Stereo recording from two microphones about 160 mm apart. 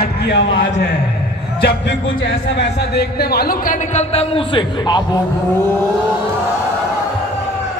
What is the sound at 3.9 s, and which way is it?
A man's voice, 40° left (ahead or behind).